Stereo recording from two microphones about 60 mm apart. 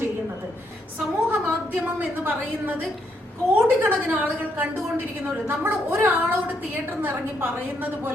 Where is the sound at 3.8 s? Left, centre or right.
Right.